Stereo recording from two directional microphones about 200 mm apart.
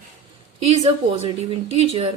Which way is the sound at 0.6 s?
30° right (ahead or behind).